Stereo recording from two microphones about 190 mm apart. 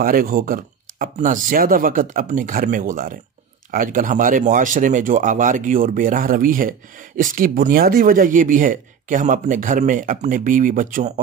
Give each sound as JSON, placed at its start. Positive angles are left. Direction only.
{"t": 0.0, "sound": "speech", "side_deg": -50}